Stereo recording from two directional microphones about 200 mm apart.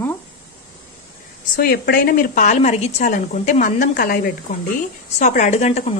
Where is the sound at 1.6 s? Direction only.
50° left (ahead or behind).